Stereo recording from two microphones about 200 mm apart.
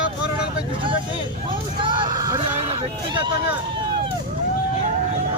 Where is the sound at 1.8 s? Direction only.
20° right (ahead or behind).